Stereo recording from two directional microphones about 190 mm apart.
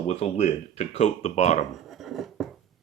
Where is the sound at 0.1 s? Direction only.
35° left (ahead or behind).